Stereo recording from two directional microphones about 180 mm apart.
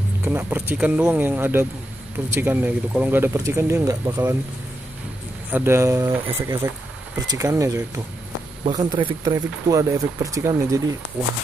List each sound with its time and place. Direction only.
0.2 s speech: 10° right (ahead or behind)
5.5 s speech: 15° right (ahead or behind)